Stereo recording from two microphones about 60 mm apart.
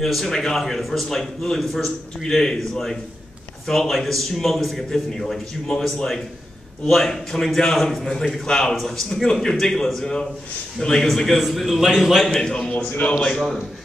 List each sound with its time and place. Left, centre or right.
0.0 s a man's voice: centre
2.2 s a man's voice: centre
12.3 s a man's voice: centre